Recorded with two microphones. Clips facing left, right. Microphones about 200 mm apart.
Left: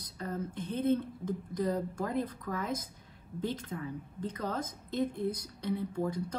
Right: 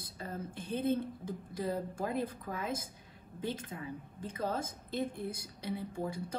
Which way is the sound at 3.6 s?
10° right (ahead or behind).